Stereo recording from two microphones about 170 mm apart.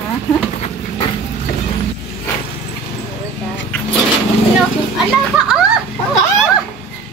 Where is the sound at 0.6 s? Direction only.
30° left (ahead or behind).